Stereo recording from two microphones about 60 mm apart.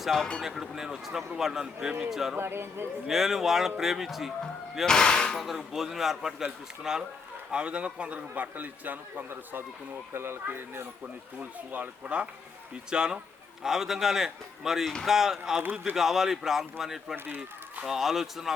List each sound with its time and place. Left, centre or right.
0.0 s a man's voice: centre
2.3 s speech: right
3.1 s speech: centre
4.9 s speech: centre
5.4 s a man's voice: centre; by 10.8 s right
11.3 s a man's voice: right; by 17.2 s centre
17.2 s speech: right
17.8 s speech: centre